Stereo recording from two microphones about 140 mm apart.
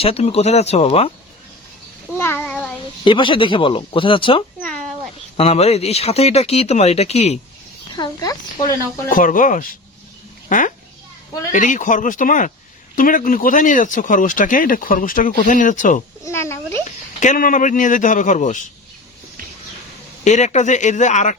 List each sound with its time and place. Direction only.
0.0 s speech: 45° left (ahead or behind)
2.1 s child singing: 15° left (ahead or behind)
3.0 s speech: 35° left (ahead or behind)
4.6 s a sound: 5° left (ahead or behind)
5.4 s speech: 45° left (ahead or behind)
7.9 s a sound: 30° left (ahead or behind)
9.0 s speech: 75° left (ahead or behind)
16.2 s speech: 20° left (ahead or behind)
17.2 s speech: 70° left (ahead or behind)
20.2 s speech: 55° left (ahead or behind)